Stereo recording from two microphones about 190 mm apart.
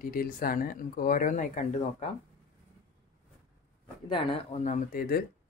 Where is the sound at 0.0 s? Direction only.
45° left (ahead or behind).